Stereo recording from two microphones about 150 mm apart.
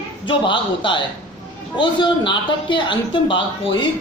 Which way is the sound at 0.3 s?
30° left (ahead or behind).